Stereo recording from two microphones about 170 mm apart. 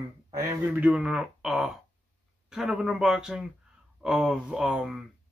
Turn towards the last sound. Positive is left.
turn(degrees=-5)  # may be behind; listen again after turning